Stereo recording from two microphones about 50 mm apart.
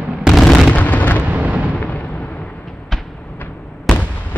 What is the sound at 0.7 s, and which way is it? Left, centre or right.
Artillery fire, left.